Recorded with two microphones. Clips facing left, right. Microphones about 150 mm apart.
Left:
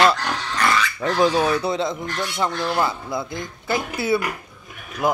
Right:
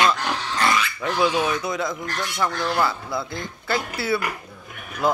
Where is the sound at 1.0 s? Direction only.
40° left (ahead or behind); by 4.2 s 20° left (ahead or behind).